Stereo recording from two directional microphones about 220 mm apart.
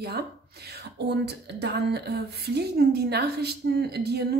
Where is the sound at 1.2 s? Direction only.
50° right (ahead or behind).